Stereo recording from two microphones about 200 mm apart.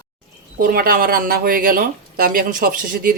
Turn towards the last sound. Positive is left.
turn(degrees=-45)  # may be behind; listen again after turning